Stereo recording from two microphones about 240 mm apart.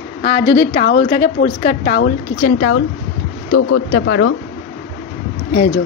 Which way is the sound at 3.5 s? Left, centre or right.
Left.